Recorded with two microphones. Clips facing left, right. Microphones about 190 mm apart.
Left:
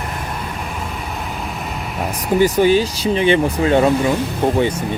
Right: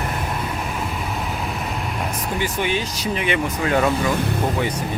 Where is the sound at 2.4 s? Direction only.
40° left (ahead or behind).